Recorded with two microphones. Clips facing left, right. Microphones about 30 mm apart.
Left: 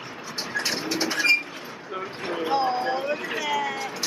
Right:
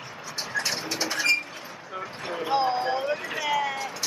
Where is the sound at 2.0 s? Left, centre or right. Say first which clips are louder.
Left 2 dB; centre.